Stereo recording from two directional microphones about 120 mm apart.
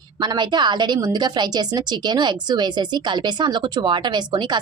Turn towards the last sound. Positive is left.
turn(degrees=-40)  # may be behind; listen again after turning